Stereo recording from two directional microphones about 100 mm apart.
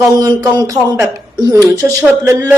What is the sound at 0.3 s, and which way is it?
Speech, 15° left (ahead or behind).